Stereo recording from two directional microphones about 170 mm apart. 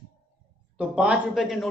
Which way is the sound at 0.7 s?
5° right (ahead or behind).